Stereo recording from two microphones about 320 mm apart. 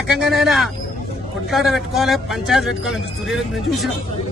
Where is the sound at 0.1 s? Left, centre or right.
Centre.